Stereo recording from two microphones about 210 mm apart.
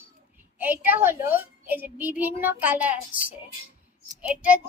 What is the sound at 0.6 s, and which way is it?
A woman's voice, 10° right (ahead or behind).